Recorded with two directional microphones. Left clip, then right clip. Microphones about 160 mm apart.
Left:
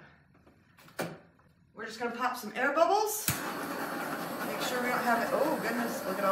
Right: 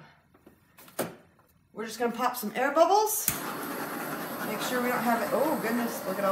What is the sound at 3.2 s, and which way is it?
Speech, 10° right (ahead or behind).